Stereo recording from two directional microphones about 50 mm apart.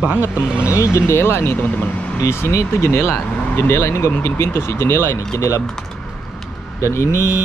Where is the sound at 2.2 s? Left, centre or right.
Left.